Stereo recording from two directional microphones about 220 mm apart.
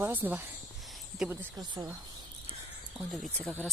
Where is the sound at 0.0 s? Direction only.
10° right (ahead or behind).